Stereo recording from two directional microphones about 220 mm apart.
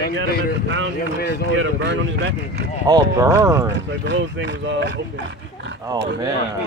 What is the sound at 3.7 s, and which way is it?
Speech, 55° right (ahead or behind).